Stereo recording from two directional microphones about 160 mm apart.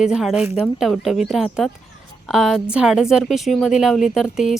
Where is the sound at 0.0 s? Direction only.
5° right (ahead or behind).